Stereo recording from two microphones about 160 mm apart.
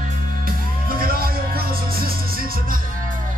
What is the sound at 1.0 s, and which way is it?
Music, 65° right (ahead or behind).